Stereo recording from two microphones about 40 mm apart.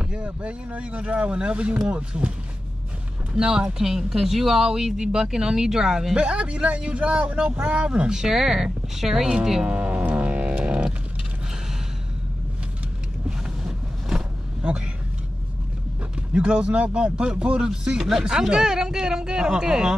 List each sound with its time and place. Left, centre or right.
0.0 s speech: right
3.3 s speech: centre
6.1 s a man's voice: right
8.1 s speech: centre
9.7 s speech: right
10.1 s music: right
10.4 s music: right
13.7 s vehicle: centre
16.3 s a man's voice: right